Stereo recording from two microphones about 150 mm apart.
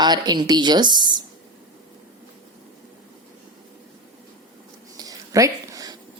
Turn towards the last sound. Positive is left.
turn(degrees=-25)  # may be behind; listen again after turning